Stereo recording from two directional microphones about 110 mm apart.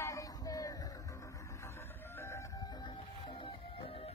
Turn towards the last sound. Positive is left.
turn(degrees=55)  # may be behind; listen again after turning